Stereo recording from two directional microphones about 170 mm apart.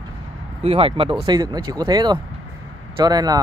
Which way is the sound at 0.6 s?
35° right (ahead or behind).